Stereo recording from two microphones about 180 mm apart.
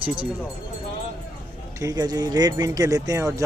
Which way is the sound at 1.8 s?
20° right (ahead or behind).